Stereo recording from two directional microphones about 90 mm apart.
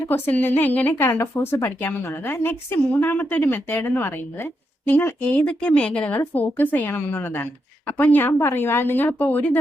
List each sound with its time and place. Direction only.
0.1 s a woman's voice: 20° left (ahead or behind)